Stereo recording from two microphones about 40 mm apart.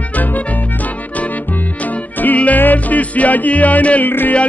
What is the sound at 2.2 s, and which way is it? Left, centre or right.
Music, left.